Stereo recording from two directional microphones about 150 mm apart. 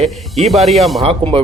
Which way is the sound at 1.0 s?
40° right (ahead or behind).